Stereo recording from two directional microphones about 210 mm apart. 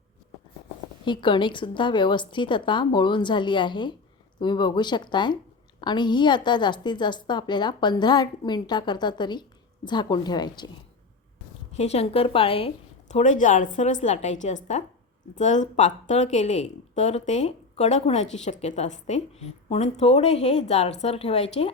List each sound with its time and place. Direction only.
1.0 s a woman's voice: 20° left (ahead or behind)
11.8 s a woman's voice: 30° left (ahead or behind)